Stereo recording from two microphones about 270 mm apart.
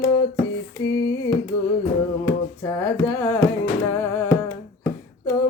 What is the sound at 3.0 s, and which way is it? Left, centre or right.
Music, centre.